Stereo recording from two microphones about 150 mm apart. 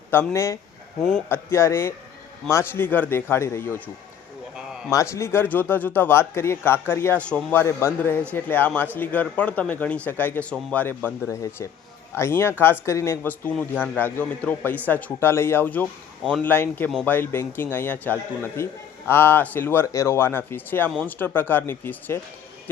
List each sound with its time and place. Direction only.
0.1 s a man's voice: 15° left (ahead or behind)
4.5 s a sound: 5° right (ahead or behind)
4.9 s a man's voice: 20° left (ahead or behind)
13.6 s a man's voice: 5° left (ahead or behind)